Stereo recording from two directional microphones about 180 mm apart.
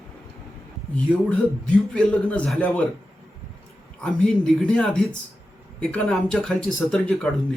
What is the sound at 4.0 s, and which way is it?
Speech, 5° left (ahead or behind).